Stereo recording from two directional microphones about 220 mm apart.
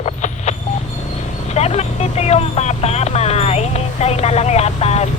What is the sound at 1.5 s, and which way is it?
Speech, 30° left (ahead or behind).